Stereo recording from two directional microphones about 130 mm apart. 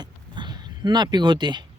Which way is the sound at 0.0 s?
35° right (ahead or behind).